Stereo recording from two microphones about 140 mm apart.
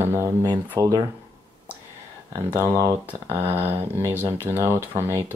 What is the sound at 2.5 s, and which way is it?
Speech, 20° right (ahead or behind).